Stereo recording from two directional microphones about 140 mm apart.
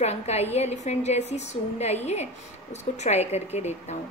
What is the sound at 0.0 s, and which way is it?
A woman's voice, 50° left (ahead or behind).